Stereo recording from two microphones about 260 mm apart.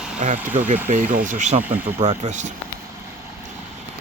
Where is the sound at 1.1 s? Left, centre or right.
Right.